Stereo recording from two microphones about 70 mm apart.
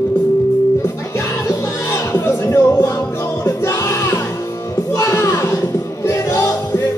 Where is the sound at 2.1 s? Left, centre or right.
Left.